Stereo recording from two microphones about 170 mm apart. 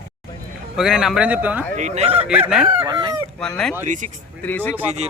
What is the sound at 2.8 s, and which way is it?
Speech, 25° right (ahead or behind).